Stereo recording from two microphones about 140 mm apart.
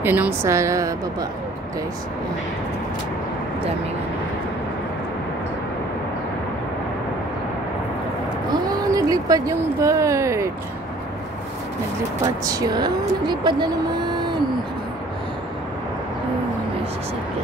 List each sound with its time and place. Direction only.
0.0 s a woman's voice: 15° right (ahead or behind)
8.6 s speech: 25° right (ahead or behind)
12.4 s speech: 25° right (ahead or behind)